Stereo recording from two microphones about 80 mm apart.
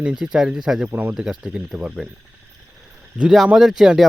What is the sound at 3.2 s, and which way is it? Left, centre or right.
Speech, centre.